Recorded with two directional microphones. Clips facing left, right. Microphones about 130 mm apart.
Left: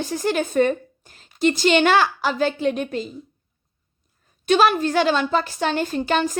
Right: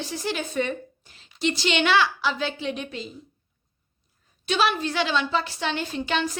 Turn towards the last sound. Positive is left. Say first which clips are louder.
# left 5 dB
turn(degrees=45)  # may be behind; listen again after turning